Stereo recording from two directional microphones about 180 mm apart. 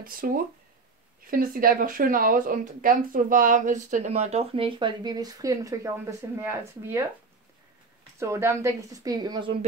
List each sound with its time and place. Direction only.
0.0 s a woman's voice: 50° right (ahead or behind); by 7.1 s 15° right (ahead or behind)
8.2 s speech: 15° right (ahead or behind)